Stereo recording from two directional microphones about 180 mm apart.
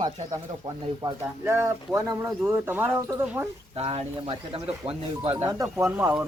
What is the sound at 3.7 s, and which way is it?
Speech, 35° right (ahead or behind).